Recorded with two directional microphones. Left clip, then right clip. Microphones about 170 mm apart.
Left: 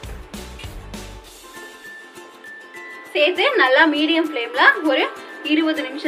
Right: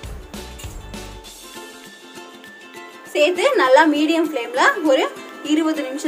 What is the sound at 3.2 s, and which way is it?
A woman's voice, 90° right.